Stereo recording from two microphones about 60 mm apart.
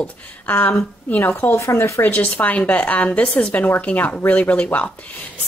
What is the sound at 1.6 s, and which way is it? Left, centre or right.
Speech, left.